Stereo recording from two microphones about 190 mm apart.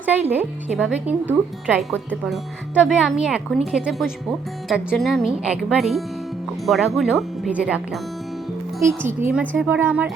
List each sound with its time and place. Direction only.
0.0 s speech: 10° right (ahead or behind)